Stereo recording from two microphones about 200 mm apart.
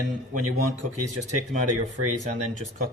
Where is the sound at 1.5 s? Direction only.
40° right (ahead or behind).